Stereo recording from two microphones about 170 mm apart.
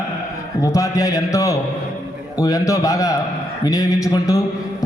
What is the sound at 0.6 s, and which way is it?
A man's voice, 20° left (ahead or behind).